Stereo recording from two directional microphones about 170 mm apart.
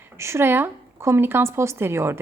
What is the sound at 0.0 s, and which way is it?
Speech, 15° right (ahead or behind).